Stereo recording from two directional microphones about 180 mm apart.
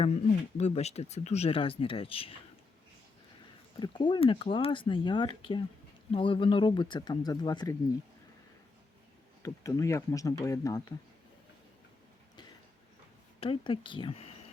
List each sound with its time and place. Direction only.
0.0 s speech: 35° left (ahead or behind)
3.8 s speech: 25° left (ahead or behind)
9.4 s speech: 20° left (ahead or behind)
13.4 s speech: 30° left (ahead or behind)